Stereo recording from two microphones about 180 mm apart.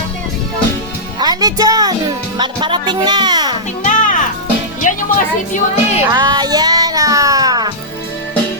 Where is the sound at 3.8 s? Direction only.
45° left (ahead or behind).